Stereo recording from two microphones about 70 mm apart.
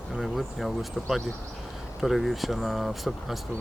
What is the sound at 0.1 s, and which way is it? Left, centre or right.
Speech, centre.